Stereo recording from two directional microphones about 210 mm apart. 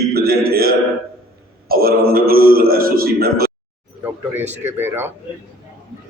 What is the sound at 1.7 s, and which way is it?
Speech, 45° right (ahead or behind).